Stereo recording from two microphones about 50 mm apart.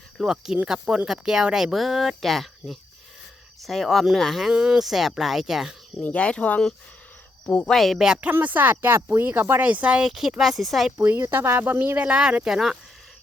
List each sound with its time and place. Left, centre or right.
0.3 s speech: centre
4.5 s speech: centre
4.8 s speech: centre
6.0 s speech: left
7.7 s speech: centre
7.9 s speech: centre
8.3 s speech: right
9.6 s speech: right
10.1 s speech: centre
10.9 s speech: right
11.9 s speech: right
12.5 s speech: centre